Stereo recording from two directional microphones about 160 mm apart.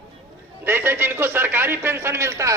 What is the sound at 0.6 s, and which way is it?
A man's voice, 15° right (ahead or behind).